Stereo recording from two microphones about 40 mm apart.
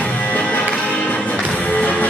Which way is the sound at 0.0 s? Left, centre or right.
Left.